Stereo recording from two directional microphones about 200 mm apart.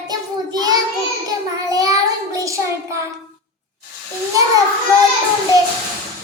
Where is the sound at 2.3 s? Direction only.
15° right (ahead or behind).